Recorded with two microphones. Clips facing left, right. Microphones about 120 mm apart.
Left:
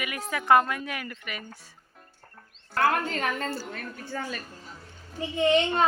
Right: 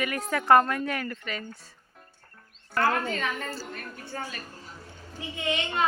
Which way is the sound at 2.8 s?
65° left (ahead or behind).